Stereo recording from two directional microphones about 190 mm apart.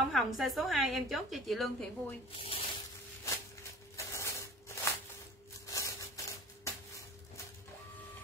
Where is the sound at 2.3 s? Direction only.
30° left (ahead or behind).